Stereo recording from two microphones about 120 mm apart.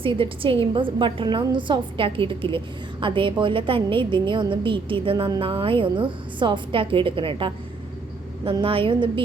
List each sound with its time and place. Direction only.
0.0 s a woman's voice: 45° right (ahead or behind)
8.6 s a woman's voice: 50° right (ahead or behind)